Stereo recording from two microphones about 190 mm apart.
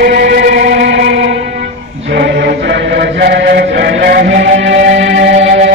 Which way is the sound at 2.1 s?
65° right (ahead or behind).